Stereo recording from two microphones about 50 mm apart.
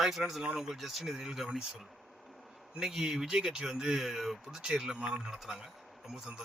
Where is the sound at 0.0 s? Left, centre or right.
Centre.